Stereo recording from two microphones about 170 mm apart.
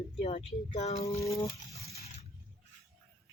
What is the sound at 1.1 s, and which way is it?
Speech, 20° left (ahead or behind).